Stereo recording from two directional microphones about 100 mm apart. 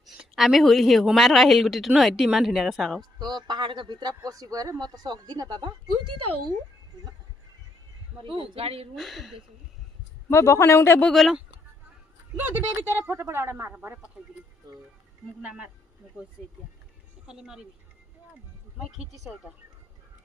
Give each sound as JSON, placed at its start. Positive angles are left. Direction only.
{"t": 0.0, "sound": "a woman's voice", "side_deg": 0}
{"t": 3.0, "sound": "speech", "side_deg": -45}
{"t": 4.1, "sound": "speech", "side_deg": -35}
{"t": 8.2, "sound": "speech", "side_deg": -65}
{"t": 9.0, "sound": "a woman's voice", "side_deg": 0}
{"t": 10.2, "sound": "a man's voice", "side_deg": 25}
{"t": 11.0, "sound": "a woman's voice", "side_deg": 0}
{"t": 12.4, "sound": "a woman's voice", "side_deg": -20}
{"t": 15.4, "sound": "speech", "side_deg": -10}
{"t": 17.2, "sound": "a woman's voice", "side_deg": -5}
{"t": 18.9, "sound": "a woman's voice", "side_deg": 0}